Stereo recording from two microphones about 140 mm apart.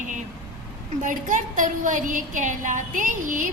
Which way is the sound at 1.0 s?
65° right (ahead or behind).